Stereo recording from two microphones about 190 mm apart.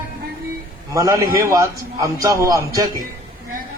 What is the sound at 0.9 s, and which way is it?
A man's voice, 20° right (ahead or behind).